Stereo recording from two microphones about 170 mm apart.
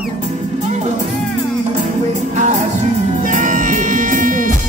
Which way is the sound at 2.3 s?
45° right (ahead or behind).